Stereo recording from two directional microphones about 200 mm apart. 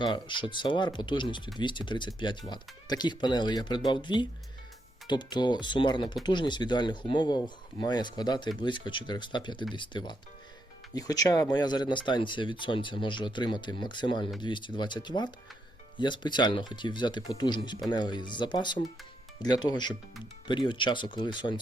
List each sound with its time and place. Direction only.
0.0 s speech: 25° left (ahead or behind)